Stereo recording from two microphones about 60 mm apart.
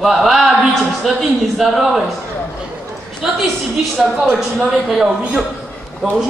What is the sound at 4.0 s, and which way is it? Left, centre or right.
Speech, centre.